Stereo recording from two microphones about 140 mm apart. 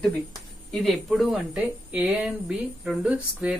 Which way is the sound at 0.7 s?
Centre (ahead or behind).